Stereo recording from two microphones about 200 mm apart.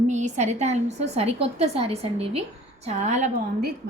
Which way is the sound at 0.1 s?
35° right (ahead or behind).